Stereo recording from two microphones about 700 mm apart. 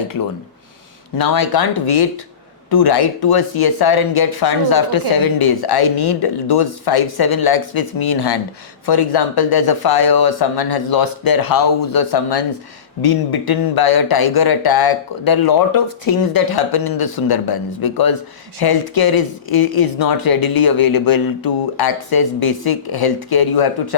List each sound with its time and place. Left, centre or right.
1.2 s speech: left